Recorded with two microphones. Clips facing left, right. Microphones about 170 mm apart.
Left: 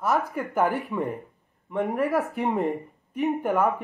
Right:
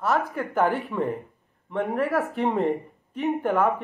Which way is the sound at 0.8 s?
15° left (ahead or behind).